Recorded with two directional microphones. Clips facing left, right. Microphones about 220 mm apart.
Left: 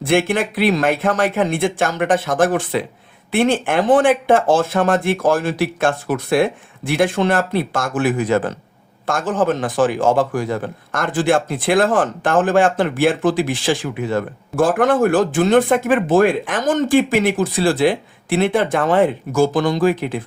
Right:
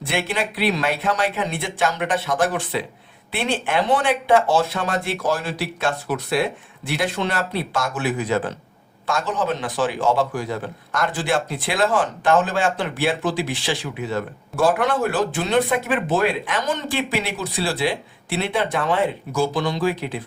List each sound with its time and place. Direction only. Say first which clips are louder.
0.0 s speech: left 8 dB; 50° left (ahead or behind)